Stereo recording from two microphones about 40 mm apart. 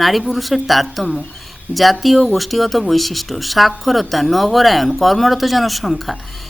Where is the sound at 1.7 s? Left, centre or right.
Right.